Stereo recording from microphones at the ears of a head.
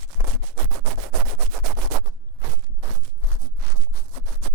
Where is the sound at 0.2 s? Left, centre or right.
Right.